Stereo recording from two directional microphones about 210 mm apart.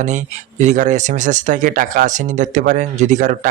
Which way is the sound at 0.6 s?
35° right (ahead or behind).